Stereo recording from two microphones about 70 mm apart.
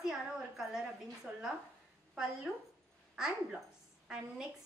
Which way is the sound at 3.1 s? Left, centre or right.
Centre.